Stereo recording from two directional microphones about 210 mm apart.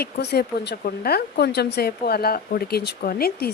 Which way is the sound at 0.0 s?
50° left (ahead or behind).